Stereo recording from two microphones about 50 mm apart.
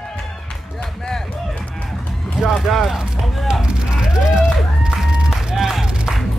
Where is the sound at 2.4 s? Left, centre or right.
Centre.